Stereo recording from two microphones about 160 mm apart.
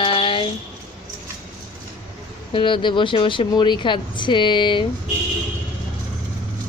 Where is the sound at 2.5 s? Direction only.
30° left (ahead or behind).